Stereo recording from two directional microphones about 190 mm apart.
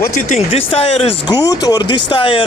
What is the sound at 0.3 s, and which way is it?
Speech, 30° left (ahead or behind).